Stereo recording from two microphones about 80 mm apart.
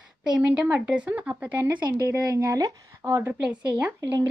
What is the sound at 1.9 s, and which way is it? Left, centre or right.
A woman's voice, right.